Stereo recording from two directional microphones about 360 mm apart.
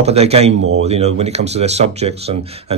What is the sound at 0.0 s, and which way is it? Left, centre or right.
Speech, centre.